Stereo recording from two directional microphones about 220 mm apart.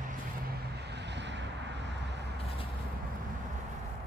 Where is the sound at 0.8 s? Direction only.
50° right (ahead or behind).